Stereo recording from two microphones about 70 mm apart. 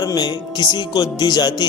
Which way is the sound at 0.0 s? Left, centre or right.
Left.